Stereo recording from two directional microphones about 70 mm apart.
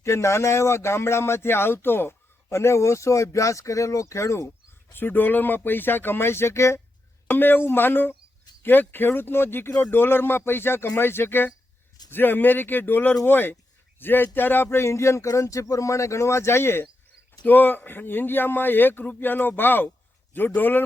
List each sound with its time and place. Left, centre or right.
0.0 s speech: left
4.9 s speech: left
7.3 s speech: left
17.4 s speech: left